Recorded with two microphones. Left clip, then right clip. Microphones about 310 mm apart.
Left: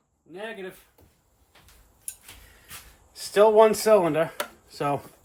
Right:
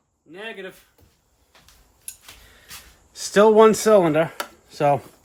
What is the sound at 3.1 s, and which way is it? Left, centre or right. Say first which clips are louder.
Speech: right 3 dB; right.